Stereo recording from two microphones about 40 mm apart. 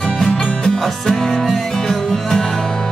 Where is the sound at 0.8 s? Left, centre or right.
Centre.